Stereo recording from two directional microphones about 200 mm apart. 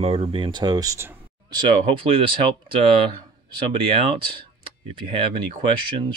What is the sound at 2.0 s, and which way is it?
Speech, 25° right (ahead or behind).